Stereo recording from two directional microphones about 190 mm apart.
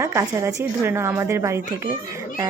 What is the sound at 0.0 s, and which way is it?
Speech, 15° right (ahead or behind).